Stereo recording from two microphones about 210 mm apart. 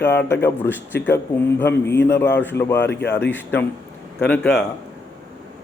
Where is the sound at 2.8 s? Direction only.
50° left (ahead or behind).